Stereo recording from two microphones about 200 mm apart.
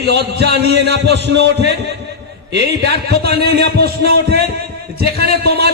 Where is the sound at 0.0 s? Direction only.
55° right (ahead or behind).